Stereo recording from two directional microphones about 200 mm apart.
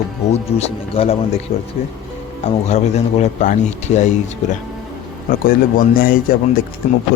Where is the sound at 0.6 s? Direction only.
30° left (ahead or behind).